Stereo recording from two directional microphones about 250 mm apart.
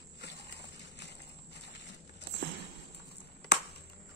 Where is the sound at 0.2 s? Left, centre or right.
Left.